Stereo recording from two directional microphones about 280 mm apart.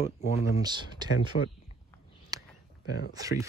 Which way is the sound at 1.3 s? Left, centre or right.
Left.